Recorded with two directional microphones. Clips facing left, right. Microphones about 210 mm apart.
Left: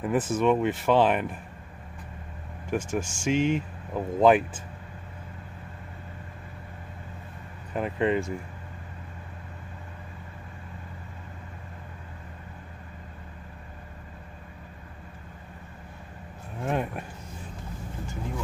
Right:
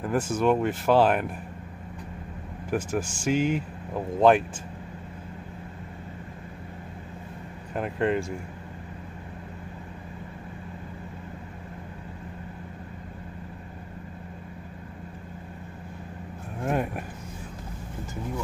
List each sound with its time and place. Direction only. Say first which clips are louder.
0.0 s speech: even; centre (ahead or behind)
2.7 s speech: right 1 dB; centre (ahead or behind)
7.7 s speech: even; centre (ahead or behind)
16.6 s speech: right 1 dB; 5° right (ahead or behind)